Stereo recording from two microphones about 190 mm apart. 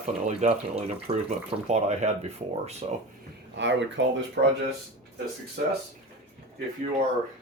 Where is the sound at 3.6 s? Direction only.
70° right (ahead or behind).